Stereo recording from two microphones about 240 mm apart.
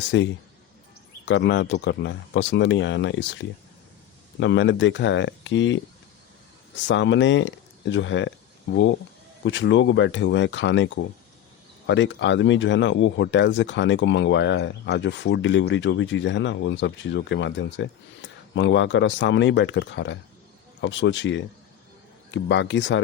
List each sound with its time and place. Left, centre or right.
0.1 s speech: left
6.8 s speech: left